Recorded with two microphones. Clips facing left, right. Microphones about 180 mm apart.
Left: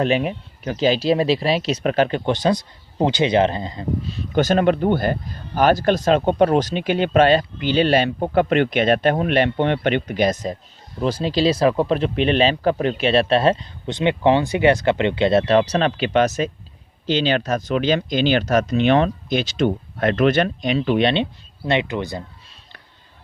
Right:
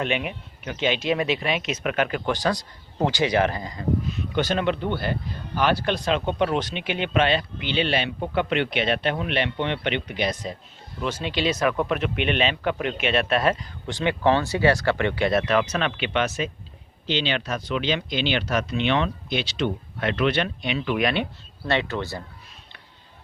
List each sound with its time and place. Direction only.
0.0 s speech: 35° left (ahead or behind)
21.7 s speech: 15° left (ahead or behind)